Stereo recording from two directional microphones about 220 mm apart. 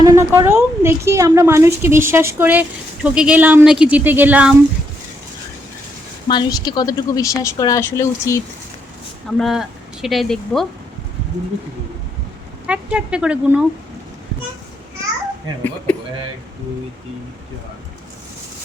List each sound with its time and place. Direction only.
0.0 s a woman's voice: 10° right (ahead or behind)
6.2 s a woman's voice: 20° left (ahead or behind)
9.4 s speech: centre (ahead or behind)
12.6 s speech: 5° right (ahead or behind)